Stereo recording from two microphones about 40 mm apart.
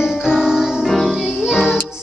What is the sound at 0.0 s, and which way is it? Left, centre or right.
Music, centre.